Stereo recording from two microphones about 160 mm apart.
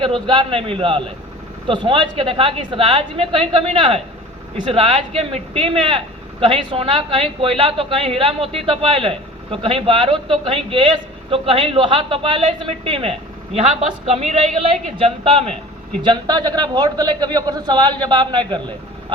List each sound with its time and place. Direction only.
0.0 s a woman's voice: 30° right (ahead or behind)
16.0 s a man's voice: 25° right (ahead or behind)